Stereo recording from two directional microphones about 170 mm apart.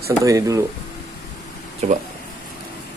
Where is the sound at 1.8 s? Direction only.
40° right (ahead or behind).